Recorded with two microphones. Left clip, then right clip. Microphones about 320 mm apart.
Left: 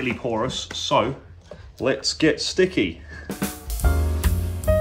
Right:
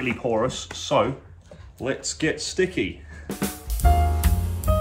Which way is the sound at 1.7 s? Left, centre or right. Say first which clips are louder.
Left 6 dB; centre.